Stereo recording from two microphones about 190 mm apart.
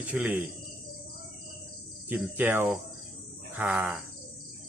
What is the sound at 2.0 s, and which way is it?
Cricket, 10° right (ahead or behind).